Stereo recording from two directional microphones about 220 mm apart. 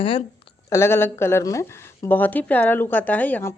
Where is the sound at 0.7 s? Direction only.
10° left (ahead or behind).